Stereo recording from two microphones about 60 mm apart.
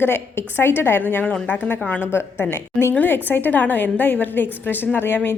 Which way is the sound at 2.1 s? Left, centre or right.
Left.